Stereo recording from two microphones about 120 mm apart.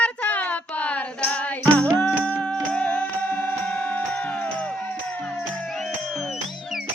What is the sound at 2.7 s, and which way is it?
Music, 10° left (ahead or behind).